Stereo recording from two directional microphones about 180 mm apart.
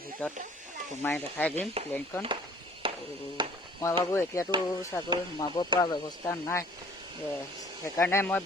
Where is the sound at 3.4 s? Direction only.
25° right (ahead or behind).